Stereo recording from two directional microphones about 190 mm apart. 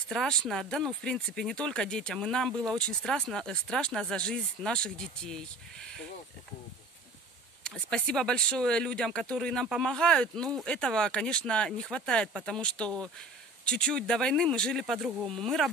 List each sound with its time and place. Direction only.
0.1 s speech: centre (ahead or behind)
7.6 s speech: 5° left (ahead or behind)